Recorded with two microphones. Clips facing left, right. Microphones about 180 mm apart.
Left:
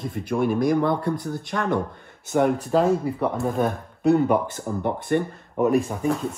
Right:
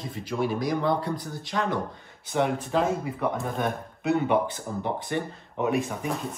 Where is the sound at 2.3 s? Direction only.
40° left (ahead or behind).